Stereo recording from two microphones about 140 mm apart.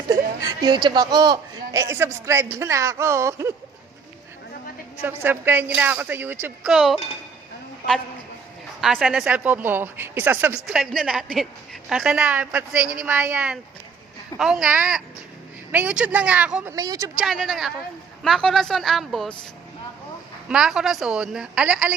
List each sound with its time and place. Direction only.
0.1 s a woman's voice: 30° right (ahead or behind)
5.0 s a woman's voice: 15° right (ahead or behind)
8.8 s a woman's voice: centre (ahead or behind)
10.7 s a woman's voice: 5° right (ahead or behind)
16.7 s a woman's voice: 25° right (ahead or behind)
17.2 s a woman's voice: centre (ahead or behind)
20.5 s a woman's voice: 5° right (ahead or behind)